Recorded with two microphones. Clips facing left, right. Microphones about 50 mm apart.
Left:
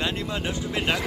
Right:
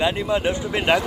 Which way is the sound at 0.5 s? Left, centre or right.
Right.